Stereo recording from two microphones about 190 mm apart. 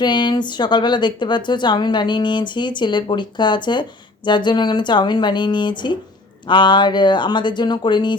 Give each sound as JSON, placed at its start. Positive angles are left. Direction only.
{"t": 0.0, "sound": "speech", "side_deg": 25}